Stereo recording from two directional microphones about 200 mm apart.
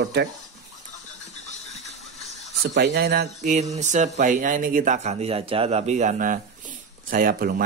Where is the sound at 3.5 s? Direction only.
35° right (ahead or behind).